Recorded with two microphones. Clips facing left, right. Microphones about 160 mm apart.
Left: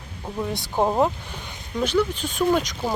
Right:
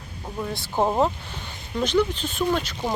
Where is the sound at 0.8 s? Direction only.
Centre (ahead or behind).